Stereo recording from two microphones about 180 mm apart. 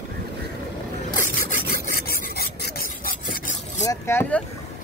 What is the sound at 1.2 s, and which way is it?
Zipper, 45° left (ahead or behind).